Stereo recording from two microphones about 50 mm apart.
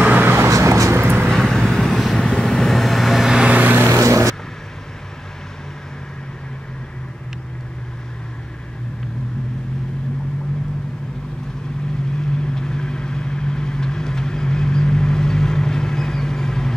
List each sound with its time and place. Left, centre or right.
0.0 s a sound: right
0.5 s vehicle: right
1.2 s vehicle: centre
3.4 s vehicle: right
3.9 s vehicle: right
12.2 s vehicle: centre